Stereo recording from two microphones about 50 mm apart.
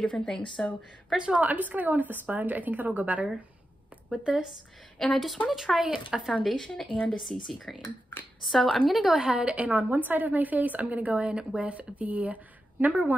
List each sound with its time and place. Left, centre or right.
0.0 s speech: centre
1.1 s a woman's voice: centre
1.4 s a woman's voice: right
4.9 s speech: centre
6.6 s speech: centre
9.2 s a woman's voice: right